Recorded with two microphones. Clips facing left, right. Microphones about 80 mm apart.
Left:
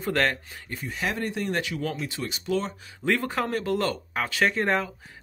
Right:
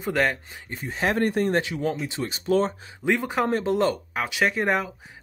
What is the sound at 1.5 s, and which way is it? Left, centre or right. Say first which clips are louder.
Speech: right 4 dB; right.